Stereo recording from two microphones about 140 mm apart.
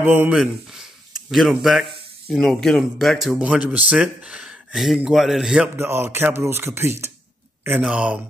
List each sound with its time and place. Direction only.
0.0 s speech: 15° right (ahead or behind)
0.4 s speech: 5° right (ahead or behind)
5.8 s speech: 15° right (ahead or behind)